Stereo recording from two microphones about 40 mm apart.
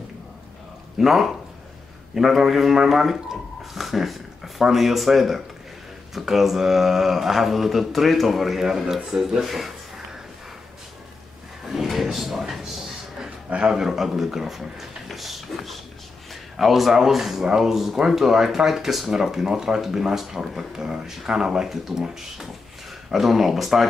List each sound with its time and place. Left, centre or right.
0.9 s speech: centre
11.6 s drawer open or close: centre
13.7 s speech: centre
21.6 s speech: centre
23.1 s speech: centre